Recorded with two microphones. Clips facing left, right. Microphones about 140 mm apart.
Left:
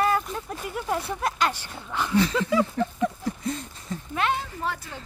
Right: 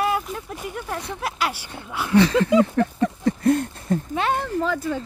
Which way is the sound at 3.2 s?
65° right (ahead or behind).